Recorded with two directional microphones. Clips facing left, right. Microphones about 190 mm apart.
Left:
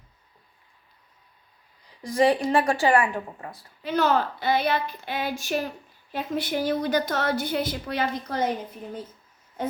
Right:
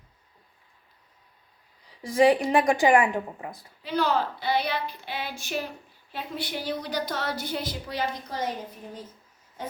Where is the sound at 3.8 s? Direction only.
50° left (ahead or behind).